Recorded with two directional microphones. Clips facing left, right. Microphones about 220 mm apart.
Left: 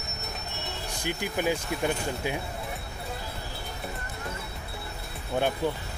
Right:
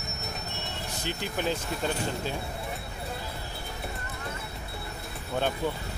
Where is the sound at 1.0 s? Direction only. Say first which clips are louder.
Left 3 dB; 10° left (ahead or behind).